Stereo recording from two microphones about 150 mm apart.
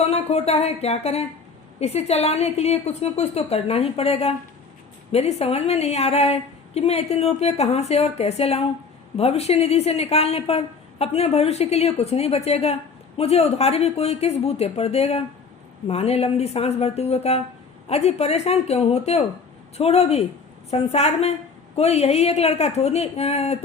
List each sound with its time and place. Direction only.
0.0 s a woman's voice: 45° left (ahead or behind)